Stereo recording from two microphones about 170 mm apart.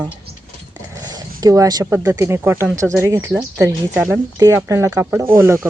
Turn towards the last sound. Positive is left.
turn(degrees=-15)  # may be behind; listen again after turning